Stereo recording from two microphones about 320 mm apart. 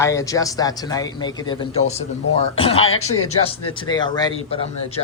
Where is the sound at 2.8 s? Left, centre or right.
Left.